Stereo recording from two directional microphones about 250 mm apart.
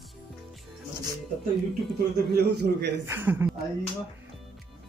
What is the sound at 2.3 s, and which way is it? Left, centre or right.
Speech, right.